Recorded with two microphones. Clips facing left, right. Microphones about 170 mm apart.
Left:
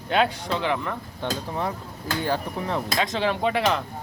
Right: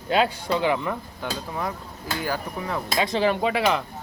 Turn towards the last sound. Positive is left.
turn(degrees=-5)  # may be behind; listen again after turning